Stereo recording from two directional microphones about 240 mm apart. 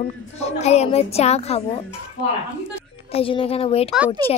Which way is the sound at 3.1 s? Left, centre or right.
Left.